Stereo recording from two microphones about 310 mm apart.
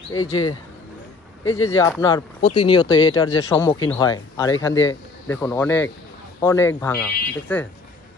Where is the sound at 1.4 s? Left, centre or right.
Left.